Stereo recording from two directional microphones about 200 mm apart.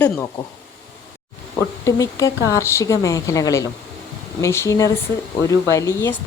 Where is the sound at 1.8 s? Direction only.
15° left (ahead or behind).